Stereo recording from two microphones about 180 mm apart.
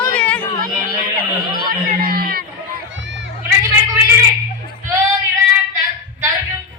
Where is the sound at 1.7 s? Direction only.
55° right (ahead or behind).